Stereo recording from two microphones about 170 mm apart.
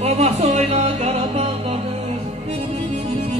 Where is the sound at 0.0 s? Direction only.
40° right (ahead or behind).